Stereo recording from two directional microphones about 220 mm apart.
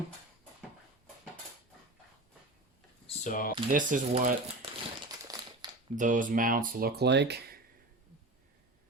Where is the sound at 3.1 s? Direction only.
35° left (ahead or behind).